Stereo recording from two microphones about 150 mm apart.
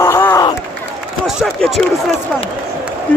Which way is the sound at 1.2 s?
Centre (ahead or behind).